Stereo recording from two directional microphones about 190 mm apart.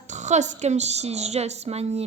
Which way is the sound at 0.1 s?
40° right (ahead or behind).